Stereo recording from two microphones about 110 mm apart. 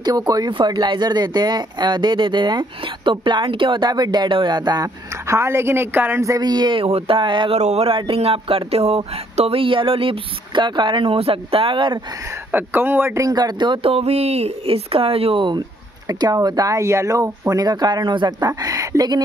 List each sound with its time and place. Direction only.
0.0 s speech: 35° right (ahead or behind)
7.5 s speech: 70° right (ahead or behind); by 12.0 s 50° right (ahead or behind)
12.4 s speech: 20° right (ahead or behind)
13.2 s speech: 35° right (ahead or behind)
13.8 s speech: 65° right (ahead or behind); by 15.6 s 50° right (ahead or behind)
16.1 s speech: 35° right (ahead or behind)
18.5 s speech: 30° right (ahead or behind)